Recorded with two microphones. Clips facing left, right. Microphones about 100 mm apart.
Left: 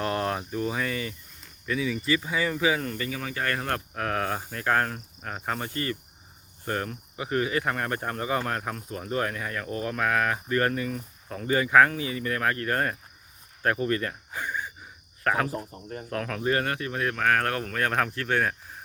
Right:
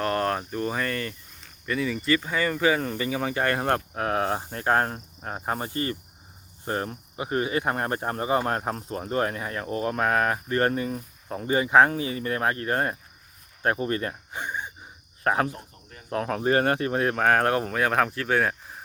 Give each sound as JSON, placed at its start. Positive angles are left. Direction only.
{"t": 0.0, "sound": "speech", "side_deg": 10}
{"t": 3.0, "sound": "speech", "side_deg": -25}
{"t": 15.4, "sound": "speech", "side_deg": 35}
{"t": 16.0, "sound": "speech", "side_deg": -25}
{"t": 17.7, "sound": "speech", "side_deg": -5}